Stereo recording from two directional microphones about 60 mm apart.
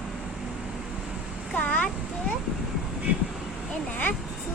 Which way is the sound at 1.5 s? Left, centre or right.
Left.